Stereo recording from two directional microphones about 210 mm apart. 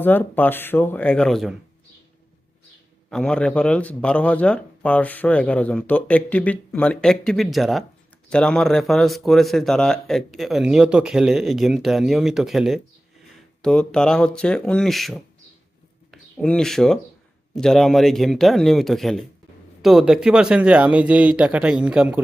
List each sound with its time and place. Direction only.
0.0 s speech: 10° left (ahead or behind)
3.1 s speech: 5° left (ahead or behind)